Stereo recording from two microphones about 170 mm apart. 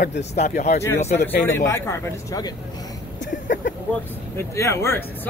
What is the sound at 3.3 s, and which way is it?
Speech, 50° left (ahead or behind).